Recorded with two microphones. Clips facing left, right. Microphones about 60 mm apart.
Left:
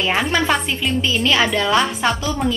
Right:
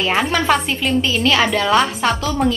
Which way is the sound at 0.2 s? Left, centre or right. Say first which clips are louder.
Right 2 dB; centre.